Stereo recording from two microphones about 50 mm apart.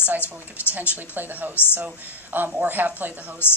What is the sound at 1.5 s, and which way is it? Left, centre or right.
Speech, left.